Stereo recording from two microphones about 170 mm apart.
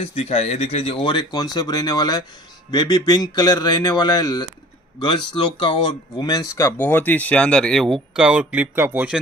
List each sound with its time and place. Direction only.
0.0 s speech: 40° left (ahead or behind); by 9.2 s 10° right (ahead or behind)